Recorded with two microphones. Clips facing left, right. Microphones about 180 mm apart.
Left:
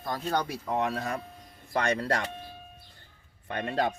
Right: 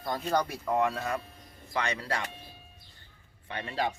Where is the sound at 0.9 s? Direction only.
40° left (ahead or behind).